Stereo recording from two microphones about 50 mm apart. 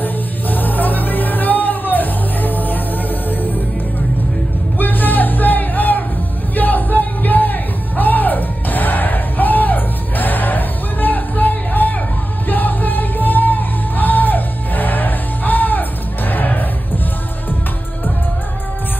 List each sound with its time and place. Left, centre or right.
0.0 s music: left
4.7 s a sound: left
6.5 s music: left